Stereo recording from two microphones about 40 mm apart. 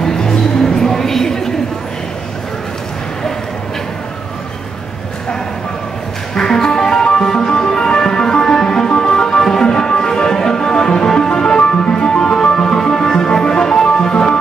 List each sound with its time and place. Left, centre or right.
0.0 s music: centre
6.3 s music: centre